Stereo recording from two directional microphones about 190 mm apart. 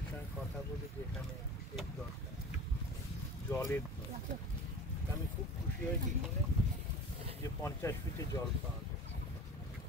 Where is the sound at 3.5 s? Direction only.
10° left (ahead or behind).